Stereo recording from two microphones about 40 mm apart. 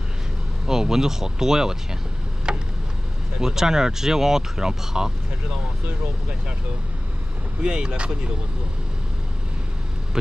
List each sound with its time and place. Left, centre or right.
0.7 s speech: centre
2.5 s a sound: right
3.3 s speech: centre
7.6 s speech: right